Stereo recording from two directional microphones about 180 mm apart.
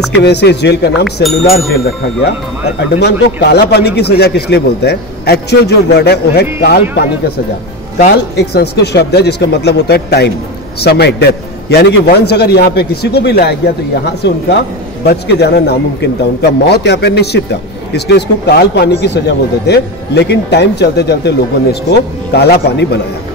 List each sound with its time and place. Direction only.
0.1 s a man's voice: 70° left (ahead or behind)
1.0 s speech: centre (ahead or behind)
3.0 s a man's voice: 65° left (ahead or behind)
8.4 s a man's voice: 65° left (ahead or behind)